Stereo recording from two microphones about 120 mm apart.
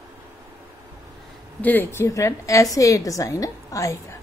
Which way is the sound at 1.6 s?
15° left (ahead or behind).